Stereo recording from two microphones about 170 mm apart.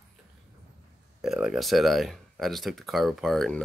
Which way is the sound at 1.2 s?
5° right (ahead or behind).